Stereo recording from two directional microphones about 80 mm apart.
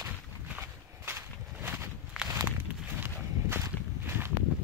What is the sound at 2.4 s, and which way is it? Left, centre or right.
Walk, right.